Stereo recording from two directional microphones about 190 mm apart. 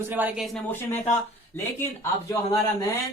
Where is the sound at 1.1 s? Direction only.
15° left (ahead or behind).